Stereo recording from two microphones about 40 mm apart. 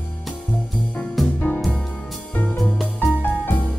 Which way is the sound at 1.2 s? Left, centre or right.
Centre.